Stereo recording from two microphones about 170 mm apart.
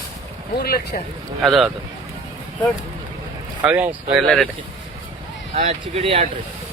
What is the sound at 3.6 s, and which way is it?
Speech, 10° right (ahead or behind).